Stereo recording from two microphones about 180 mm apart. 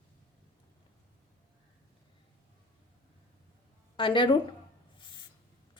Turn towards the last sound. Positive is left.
turn(degrees=25)  # may be behind; listen again after turning